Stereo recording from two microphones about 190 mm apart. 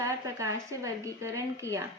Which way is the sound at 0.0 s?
15° right (ahead or behind).